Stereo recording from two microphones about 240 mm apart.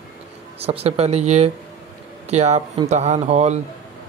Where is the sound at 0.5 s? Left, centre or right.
Right.